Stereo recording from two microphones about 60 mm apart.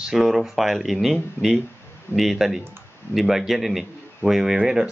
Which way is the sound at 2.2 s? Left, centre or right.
Centre.